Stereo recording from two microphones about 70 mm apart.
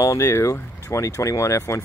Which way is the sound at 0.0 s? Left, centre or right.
Left.